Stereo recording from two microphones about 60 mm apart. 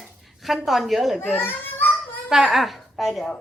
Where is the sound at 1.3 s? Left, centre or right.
Left.